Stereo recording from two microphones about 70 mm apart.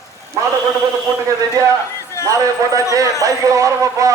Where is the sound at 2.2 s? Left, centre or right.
Right.